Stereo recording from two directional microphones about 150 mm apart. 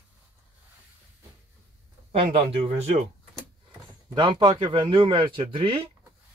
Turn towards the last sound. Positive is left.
turn(degrees=-35)  # may be behind; listen again after turning